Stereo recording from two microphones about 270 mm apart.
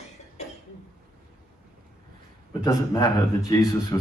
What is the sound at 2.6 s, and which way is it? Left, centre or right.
Speech, centre.